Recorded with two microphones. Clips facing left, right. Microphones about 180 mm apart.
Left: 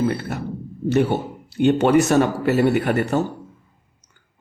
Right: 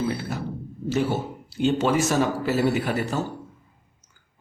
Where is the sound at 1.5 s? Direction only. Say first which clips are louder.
Left 6 dB; 65° left (ahead or behind).